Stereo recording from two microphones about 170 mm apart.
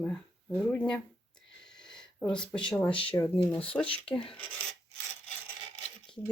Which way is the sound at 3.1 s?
20° left (ahead or behind).